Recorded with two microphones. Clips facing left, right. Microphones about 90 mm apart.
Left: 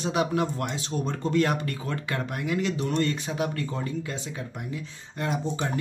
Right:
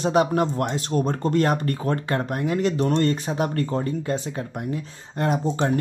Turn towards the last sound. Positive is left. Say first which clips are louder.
# right 6 dB
turn(degrees=-50)  # may be behind; listen again after turning